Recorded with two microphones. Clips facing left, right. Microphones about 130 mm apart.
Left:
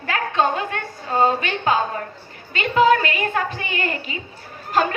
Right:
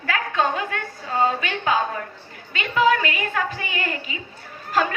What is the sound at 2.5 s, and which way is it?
A woman's voice, 30° left (ahead or behind).